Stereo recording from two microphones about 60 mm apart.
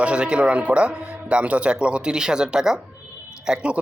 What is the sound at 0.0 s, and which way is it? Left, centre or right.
Speech, centre.